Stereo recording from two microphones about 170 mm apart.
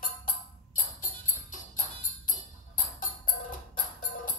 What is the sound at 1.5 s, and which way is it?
Music, 50° left (ahead or behind).